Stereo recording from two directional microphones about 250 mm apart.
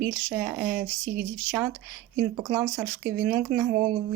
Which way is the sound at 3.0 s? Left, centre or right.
Right.